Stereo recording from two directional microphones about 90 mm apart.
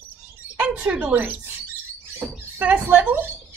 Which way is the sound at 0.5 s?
15° right (ahead or behind).